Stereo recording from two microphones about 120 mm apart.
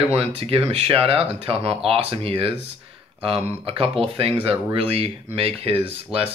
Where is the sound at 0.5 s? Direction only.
55° right (ahead or behind).